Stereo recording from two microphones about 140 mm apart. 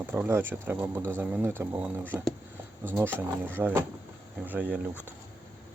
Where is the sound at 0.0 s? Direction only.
15° right (ahead or behind).